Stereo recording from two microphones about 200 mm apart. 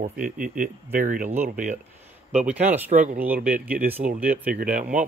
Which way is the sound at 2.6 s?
10° right (ahead or behind).